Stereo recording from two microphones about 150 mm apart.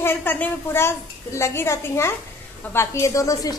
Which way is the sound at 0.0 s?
15° left (ahead or behind).